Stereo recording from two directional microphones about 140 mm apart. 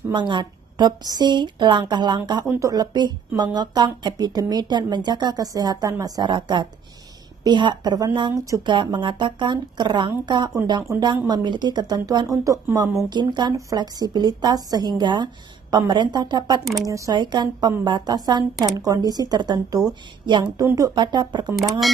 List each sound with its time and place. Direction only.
0.1 s a woman's voice: 35° right (ahead or behind)
2.4 s a woman's voice: 20° right (ahead or behind)
21.5 s speech: centre (ahead or behind)